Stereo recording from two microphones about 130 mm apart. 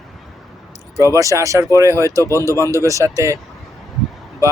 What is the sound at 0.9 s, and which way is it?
Speech, 25° right (ahead or behind).